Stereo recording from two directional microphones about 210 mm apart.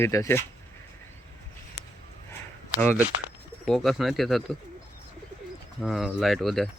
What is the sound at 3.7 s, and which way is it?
Speech, centre (ahead or behind).